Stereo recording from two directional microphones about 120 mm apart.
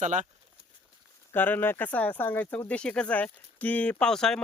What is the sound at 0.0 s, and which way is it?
Speech, 90° right.